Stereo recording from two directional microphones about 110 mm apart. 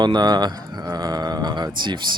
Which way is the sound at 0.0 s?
40° right (ahead or behind).